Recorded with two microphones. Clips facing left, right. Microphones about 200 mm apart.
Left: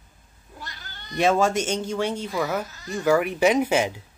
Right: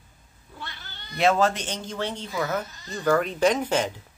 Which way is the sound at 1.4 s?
10° left (ahead or behind).